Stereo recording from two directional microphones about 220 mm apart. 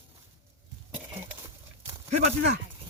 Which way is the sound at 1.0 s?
10° right (ahead or behind).